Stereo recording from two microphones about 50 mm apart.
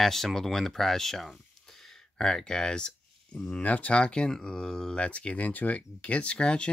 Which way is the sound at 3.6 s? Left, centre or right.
Left.